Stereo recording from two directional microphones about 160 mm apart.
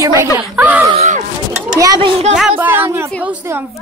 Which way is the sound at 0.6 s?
10° right (ahead or behind).